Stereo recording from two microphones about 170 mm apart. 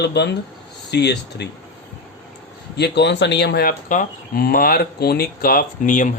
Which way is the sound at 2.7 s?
85° left.